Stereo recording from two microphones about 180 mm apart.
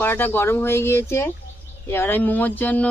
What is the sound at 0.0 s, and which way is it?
Speech, 10° left (ahead or behind).